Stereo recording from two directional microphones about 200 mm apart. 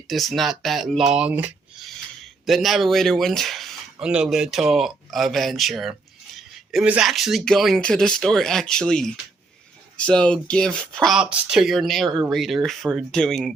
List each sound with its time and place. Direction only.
0.1 s speech: centre (ahead or behind)